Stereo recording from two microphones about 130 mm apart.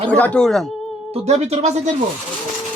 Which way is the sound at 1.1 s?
55° right (ahead or behind).